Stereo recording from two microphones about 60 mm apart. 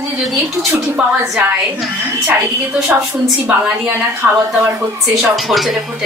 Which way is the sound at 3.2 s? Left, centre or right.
Centre.